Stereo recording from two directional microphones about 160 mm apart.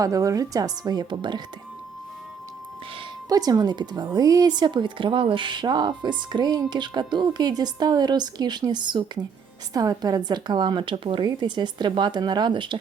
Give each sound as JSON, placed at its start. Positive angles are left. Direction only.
{"t": 0.0, "sound": "speech", "side_deg": -20}
{"t": 3.2, "sound": "speech", "side_deg": -20}